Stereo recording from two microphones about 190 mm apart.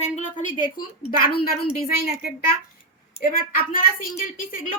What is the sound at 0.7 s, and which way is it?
Speech, 50° left (ahead or behind).